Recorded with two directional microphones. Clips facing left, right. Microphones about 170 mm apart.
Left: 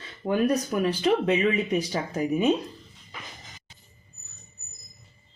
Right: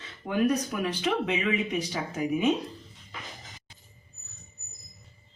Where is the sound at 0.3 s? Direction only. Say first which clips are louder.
Left 2 dB; 40° left (ahead or behind).